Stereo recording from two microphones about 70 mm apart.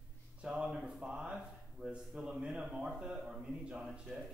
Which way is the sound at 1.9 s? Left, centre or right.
Centre.